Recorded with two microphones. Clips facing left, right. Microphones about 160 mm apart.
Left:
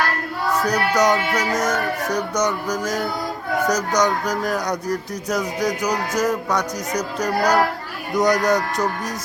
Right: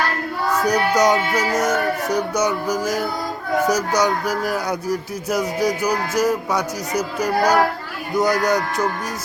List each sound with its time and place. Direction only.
0.6 s speech: 20° right (ahead or behind)
1.3 s speech: centre (ahead or behind)